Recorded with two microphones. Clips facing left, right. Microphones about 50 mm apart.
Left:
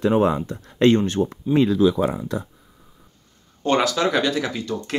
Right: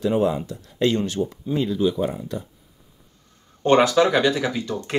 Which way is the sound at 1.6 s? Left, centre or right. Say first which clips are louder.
Left 4 dB; left.